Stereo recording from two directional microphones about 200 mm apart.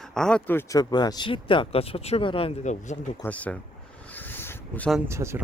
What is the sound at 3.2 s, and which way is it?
Speech, 5° left (ahead or behind).